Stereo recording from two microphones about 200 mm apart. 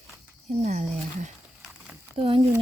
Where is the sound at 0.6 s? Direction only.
35° right (ahead or behind).